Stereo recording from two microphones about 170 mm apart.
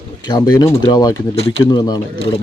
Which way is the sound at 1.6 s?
25° left (ahead or behind).